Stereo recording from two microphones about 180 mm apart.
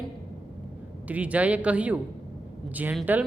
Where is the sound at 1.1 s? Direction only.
10° right (ahead or behind).